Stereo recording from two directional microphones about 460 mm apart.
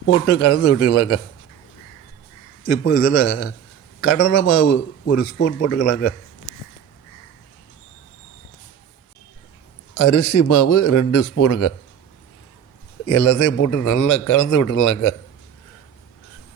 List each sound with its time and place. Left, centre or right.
0.1 s a man's voice: left
2.6 s a man's voice: left
9.9 s a man's voice: left
13.1 s a man's voice: left